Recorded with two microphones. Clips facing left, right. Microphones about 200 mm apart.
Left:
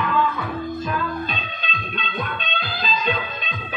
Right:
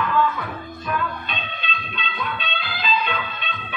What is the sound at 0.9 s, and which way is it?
Music, 40° left (ahead or behind).